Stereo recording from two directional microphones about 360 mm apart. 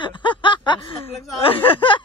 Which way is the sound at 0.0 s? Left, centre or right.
Centre.